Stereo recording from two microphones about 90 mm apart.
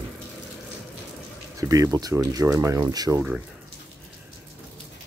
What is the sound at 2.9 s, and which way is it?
Speech, 45° right (ahead or behind).